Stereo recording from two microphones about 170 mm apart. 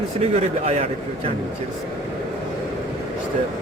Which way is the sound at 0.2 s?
40° right (ahead or behind).